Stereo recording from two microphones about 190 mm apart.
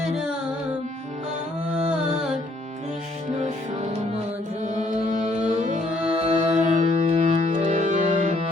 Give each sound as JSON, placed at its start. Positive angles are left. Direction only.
{"t": 0.0, "sound": "music", "side_deg": -5}
{"t": 3.4, "sound": "music", "side_deg": -40}